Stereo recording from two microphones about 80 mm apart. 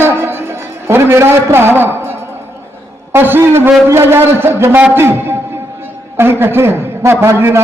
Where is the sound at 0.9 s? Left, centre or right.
Right.